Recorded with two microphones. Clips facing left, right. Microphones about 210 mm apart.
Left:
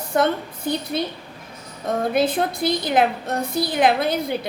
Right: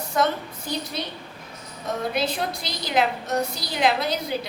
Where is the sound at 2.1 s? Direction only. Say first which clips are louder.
Left 6 dB; 50° left (ahead or behind).